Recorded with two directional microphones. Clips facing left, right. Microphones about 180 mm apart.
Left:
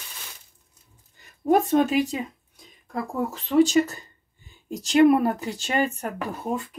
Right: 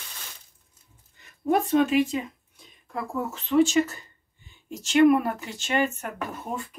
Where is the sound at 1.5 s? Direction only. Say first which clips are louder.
Left 1 dB; 40° left (ahead or behind).